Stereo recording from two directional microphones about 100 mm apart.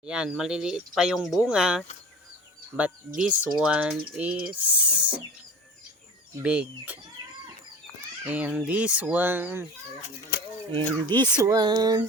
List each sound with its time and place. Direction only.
0.0 s speech: 10° right (ahead or behind)
6.4 s speech: 15° right (ahead or behind)
8.2 s speech: 15° right (ahead or behind)
10.7 s speech: 50° right (ahead or behind)